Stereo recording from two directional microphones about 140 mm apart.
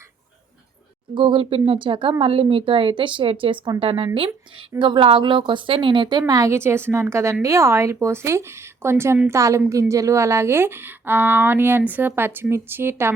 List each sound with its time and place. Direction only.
1.1 s a woman's voice: 35° right (ahead or behind); by 13.1 s 15° right (ahead or behind)